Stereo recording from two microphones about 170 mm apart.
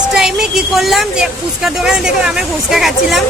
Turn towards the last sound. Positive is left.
turn(degrees=0)  # may be behind; listen again after turning